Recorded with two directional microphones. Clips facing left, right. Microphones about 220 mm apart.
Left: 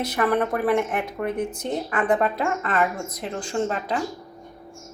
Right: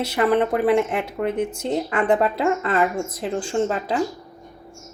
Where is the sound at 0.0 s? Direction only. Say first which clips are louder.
Right 3 dB; 25° right (ahead or behind).